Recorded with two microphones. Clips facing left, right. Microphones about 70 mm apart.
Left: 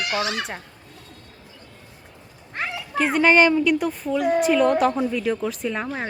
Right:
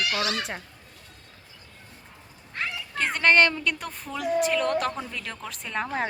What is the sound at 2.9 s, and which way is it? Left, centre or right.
A woman's voice, centre.